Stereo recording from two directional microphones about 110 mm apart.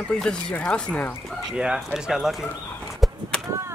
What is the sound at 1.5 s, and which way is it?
Speech, 5° right (ahead or behind).